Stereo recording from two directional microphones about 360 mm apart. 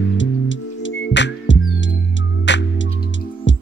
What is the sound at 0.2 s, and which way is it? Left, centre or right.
Music, left.